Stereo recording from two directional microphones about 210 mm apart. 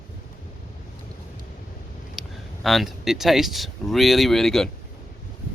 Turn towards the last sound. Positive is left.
turn(degrees=0)  # may be behind; listen again after turning